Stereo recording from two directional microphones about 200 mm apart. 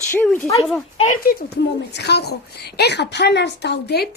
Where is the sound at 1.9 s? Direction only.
55° left (ahead or behind).